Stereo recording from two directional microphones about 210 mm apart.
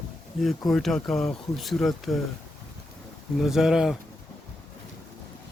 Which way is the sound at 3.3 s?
Centre (ahead or behind).